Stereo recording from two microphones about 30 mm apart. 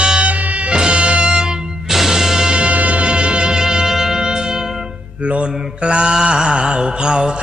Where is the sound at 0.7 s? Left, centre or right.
Right.